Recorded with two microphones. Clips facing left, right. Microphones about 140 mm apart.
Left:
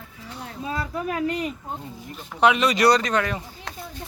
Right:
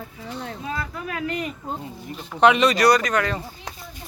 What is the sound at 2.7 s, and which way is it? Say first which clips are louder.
Speech: right 1 dB; 25° left (ahead or behind).